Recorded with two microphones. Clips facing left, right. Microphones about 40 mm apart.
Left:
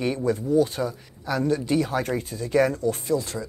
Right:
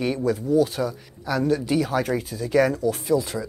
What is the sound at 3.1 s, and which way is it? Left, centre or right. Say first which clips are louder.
Speech: right 6 dB; centre.